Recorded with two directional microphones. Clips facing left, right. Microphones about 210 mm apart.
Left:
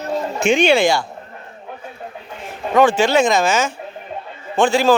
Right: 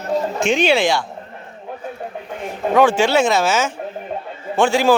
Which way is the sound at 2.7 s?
10° right (ahead or behind).